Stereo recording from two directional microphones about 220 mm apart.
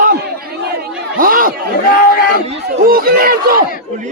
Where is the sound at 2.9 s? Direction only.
40° right (ahead or behind).